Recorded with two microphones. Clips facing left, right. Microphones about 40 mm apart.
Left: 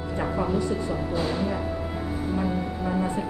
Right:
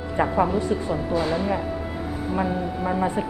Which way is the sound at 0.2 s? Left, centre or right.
Right.